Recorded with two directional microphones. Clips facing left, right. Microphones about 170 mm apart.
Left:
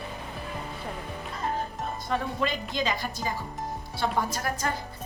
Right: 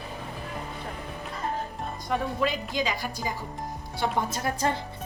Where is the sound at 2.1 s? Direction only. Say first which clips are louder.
Right 2 dB; 10° right (ahead or behind).